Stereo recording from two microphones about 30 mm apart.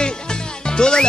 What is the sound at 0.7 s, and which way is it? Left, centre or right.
Speech, left.